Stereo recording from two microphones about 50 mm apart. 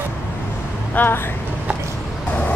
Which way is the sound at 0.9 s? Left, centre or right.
Left.